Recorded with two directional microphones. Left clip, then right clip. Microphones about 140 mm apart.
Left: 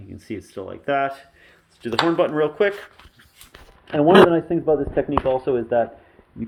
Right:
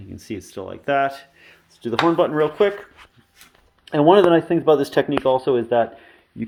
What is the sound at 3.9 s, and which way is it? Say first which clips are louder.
Speech: even; 50° right (ahead or behind).